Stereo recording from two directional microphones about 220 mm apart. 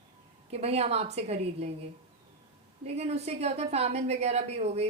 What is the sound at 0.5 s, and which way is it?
A woman's voice, 30° right (ahead or behind).